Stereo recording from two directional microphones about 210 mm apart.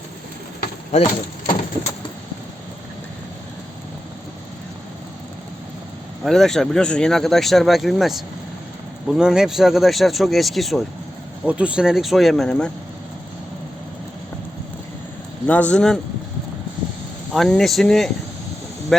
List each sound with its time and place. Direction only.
0.9 s speech: 30° left (ahead or behind)
6.2 s speech: centre (ahead or behind)
15.4 s speech: 5° left (ahead or behind)
17.3 s speech: centre (ahead or behind)